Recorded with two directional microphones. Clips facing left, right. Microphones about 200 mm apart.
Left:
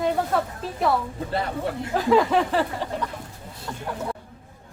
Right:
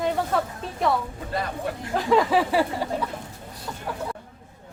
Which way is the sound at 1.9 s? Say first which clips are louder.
Left 1 dB; centre (ahead or behind).